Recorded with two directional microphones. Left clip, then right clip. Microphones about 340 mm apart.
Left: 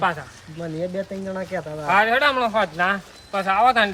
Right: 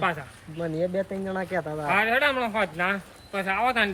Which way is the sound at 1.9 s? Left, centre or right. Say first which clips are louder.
Left 5 dB; centre.